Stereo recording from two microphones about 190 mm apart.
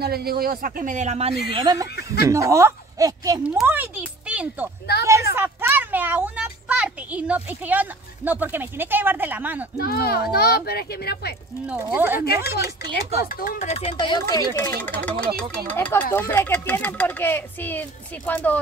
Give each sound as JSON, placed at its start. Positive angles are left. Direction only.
{"t": 0.0, "sound": "a man's voice", "side_deg": -55}
{"t": 1.5, "sound": "speech", "side_deg": -25}
{"t": 3.4, "sound": "speech", "side_deg": -10}
{"t": 4.9, "sound": "speech", "side_deg": 55}
{"t": 5.3, "sound": "a child's voice", "side_deg": -10}
{"t": 9.8, "sound": "speech", "side_deg": 55}
{"t": 11.6, "sound": "speech", "side_deg": -10}
{"t": 12.2, "sound": "speech", "side_deg": 55}